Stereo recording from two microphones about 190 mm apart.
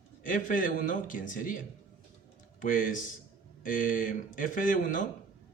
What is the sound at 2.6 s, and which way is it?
Speech, 45° left (ahead or behind).